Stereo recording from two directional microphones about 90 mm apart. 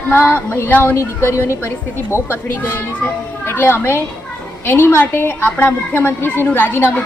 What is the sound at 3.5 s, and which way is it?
Speech, 25° left (ahead or behind).